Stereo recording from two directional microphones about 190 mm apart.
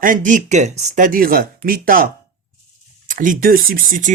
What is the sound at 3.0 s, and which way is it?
Speech, 45° right (ahead or behind).